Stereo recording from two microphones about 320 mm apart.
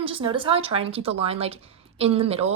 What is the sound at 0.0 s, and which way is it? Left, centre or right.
A woman's voice, centre.